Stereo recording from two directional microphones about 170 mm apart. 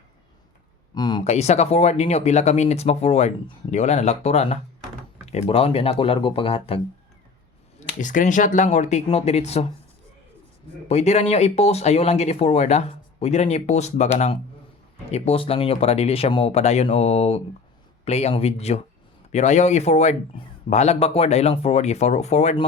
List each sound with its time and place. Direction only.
0.9 s a sound: 25° left (ahead or behind)
1.2 s speech: 40° left (ahead or behind)
8.0 s speech: 50° left (ahead or behind)
10.8 s speech: 40° left (ahead or behind)